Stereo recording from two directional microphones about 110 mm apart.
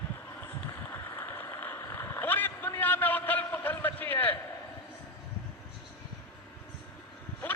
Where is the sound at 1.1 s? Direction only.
25° left (ahead or behind).